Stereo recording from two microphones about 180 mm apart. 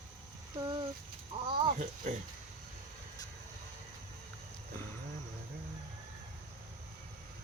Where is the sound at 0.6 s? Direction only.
25° right (ahead or behind).